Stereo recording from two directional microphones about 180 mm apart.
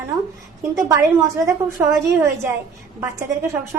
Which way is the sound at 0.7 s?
15° right (ahead or behind).